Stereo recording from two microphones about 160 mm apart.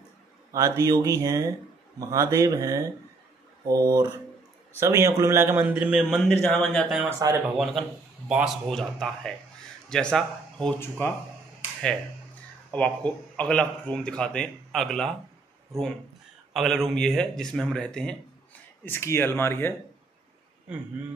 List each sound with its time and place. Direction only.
0.5 s speech: 20° right (ahead or behind)
5.6 s speech: 5° right (ahead or behind)
6.3 s speech: 10° left (ahead or behind)
7.1 s speech: 20° right (ahead or behind)
7.5 s speech: centre (ahead or behind)
12.7 s speech: 10° left (ahead or behind)
16.5 s speech: centre (ahead or behind)
18.9 s speech: 15° left (ahead or behind)